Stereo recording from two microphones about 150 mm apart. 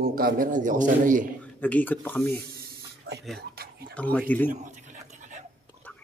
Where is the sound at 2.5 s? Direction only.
90° right.